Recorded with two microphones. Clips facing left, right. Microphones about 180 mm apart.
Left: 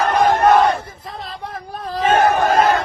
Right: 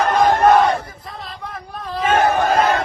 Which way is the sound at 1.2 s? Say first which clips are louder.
Left 2 dB; 30° left (ahead or behind).